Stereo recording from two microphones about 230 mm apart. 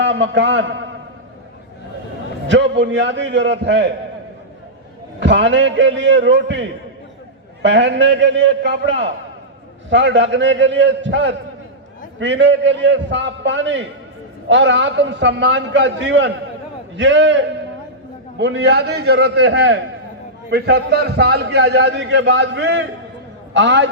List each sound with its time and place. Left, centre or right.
0.0 s a man's voice: right
2.5 s a man's voice: right
5.2 s a man's voice: right